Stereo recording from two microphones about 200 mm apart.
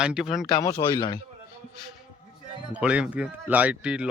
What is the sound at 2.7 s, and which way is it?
Speech, 5° right (ahead or behind).